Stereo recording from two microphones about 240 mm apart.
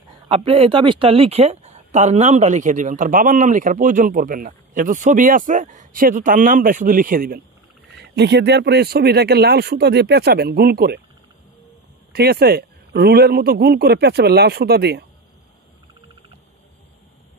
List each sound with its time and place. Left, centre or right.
0.3 s speech: right
12.1 s speech: right